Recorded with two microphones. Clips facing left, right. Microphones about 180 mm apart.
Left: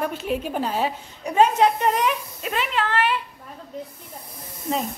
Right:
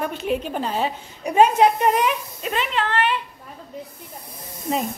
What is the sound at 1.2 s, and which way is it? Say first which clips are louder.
Speech: right 2 dB; 15° right (ahead or behind).